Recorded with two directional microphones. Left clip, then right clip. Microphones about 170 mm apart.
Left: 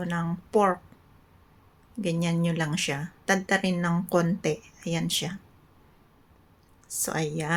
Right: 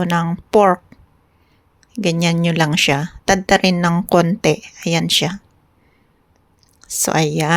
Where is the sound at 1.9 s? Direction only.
50° right (ahead or behind).